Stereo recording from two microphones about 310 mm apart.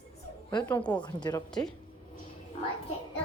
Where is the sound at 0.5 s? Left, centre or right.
Centre.